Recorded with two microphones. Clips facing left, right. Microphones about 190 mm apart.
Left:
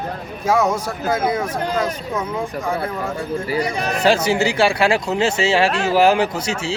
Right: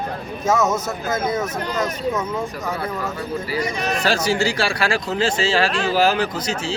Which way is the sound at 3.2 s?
30° left (ahead or behind).